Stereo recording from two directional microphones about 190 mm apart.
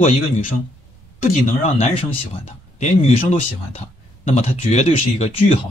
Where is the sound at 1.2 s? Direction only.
35° left (ahead or behind).